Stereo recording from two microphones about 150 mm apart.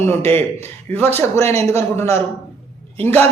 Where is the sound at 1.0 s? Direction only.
45° right (ahead or behind).